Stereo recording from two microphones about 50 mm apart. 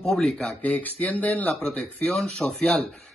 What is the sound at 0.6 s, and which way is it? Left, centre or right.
Speech, left.